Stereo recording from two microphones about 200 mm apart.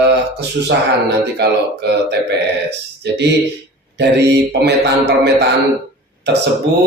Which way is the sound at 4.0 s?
55° right (ahead or behind).